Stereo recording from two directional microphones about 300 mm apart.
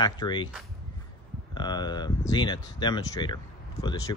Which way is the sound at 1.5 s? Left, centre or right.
Centre.